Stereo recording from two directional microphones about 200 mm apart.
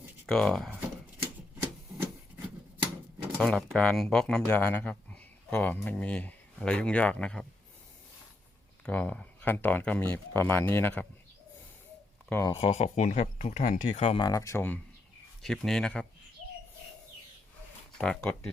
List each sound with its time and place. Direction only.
0.3 s speech: 5° left (ahead or behind)
3.3 s speech: 5° left (ahead or behind)
8.8 s speech: 5° left (ahead or behind)
12.3 s speech: 15° left (ahead or behind)
12.5 s speech: 30° left (ahead or behind)
14.3 s speech: 15° left (ahead or behind)
17.9 s speech: 5° left (ahead or behind)